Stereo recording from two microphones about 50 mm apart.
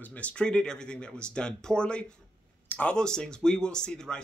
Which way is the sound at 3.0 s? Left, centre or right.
Centre.